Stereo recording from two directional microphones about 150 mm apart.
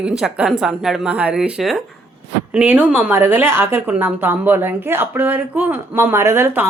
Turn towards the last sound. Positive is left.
turn(degrees=-15)  # may be behind; listen again after turning